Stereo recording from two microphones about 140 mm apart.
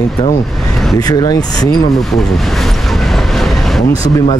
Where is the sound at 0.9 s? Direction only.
25° left (ahead or behind).